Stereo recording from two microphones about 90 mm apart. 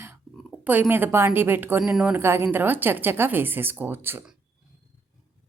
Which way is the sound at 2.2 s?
25° right (ahead or behind).